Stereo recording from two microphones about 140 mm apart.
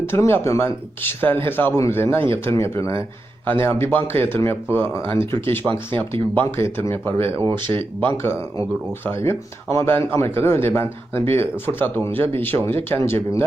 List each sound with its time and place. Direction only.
0.0 s a man's voice: 15° left (ahead or behind)
7.6 s speech: 40° right (ahead or behind)
9.0 s a man's voice: 20° left (ahead or behind)